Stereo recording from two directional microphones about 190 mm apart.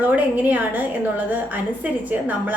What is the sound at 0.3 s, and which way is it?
A woman's voice, 10° right (ahead or behind).